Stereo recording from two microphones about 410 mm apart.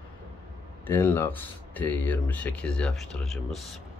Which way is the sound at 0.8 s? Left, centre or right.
Centre.